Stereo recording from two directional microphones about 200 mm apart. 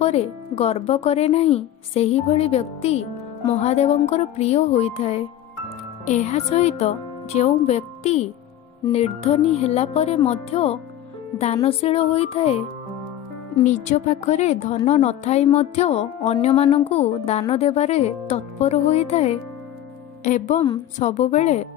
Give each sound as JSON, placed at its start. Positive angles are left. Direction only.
{"t": 0.0, "sound": "a woman's voice", "side_deg": 30}
{"t": 13.7, "sound": "a woman's voice", "side_deg": 35}